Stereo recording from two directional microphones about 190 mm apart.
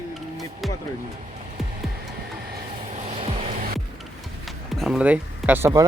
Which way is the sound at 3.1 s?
30° right (ahead or behind).